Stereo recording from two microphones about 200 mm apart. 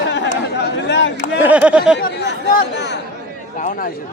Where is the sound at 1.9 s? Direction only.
60° left (ahead or behind).